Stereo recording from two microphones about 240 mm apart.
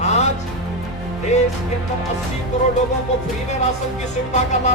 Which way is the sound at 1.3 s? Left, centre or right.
Left.